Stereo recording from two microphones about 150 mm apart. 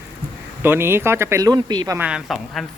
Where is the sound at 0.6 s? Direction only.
15° right (ahead or behind).